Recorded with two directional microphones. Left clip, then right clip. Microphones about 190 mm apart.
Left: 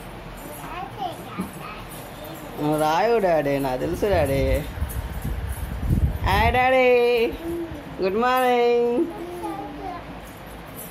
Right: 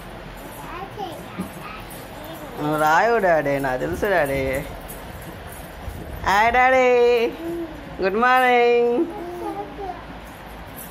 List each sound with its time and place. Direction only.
2.6 s speech: 10° left (ahead or behind)
6.2 s speech: 10° left (ahead or behind)